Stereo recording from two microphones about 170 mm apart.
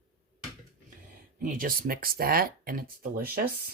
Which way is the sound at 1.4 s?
55° right (ahead or behind).